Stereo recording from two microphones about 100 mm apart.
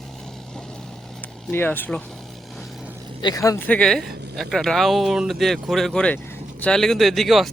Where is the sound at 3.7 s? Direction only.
5° left (ahead or behind).